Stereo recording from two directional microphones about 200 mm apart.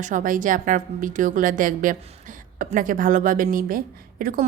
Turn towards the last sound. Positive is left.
turn(degrees=-45)  # may be behind; listen again after turning